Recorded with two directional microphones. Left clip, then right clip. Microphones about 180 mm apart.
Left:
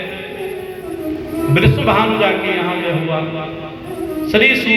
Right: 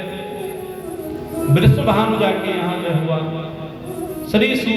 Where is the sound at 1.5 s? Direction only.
35° right (ahead or behind).